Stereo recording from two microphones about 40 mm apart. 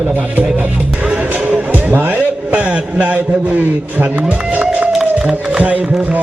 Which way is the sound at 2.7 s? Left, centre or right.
Right.